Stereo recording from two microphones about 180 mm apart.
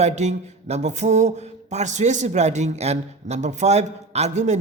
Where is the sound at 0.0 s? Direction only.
40° right (ahead or behind).